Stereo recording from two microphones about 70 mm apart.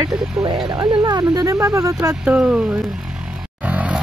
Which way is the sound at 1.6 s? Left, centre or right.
Right.